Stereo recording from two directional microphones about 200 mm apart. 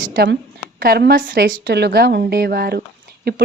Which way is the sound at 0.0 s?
50° right (ahead or behind).